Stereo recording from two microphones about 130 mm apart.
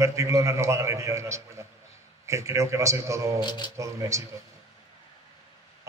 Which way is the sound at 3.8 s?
25° right (ahead or behind).